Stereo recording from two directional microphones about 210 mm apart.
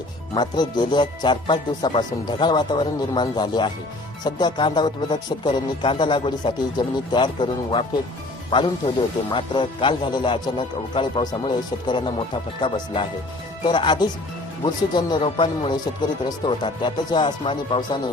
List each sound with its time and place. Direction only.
0.3 s speech: 20° left (ahead or behind)